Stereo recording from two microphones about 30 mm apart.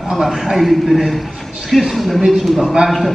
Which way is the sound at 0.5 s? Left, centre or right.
Centre.